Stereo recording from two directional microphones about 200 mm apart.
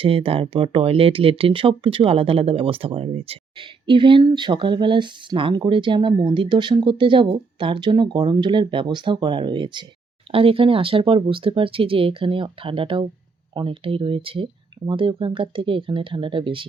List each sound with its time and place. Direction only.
0.0 s speech: 30° right (ahead or behind)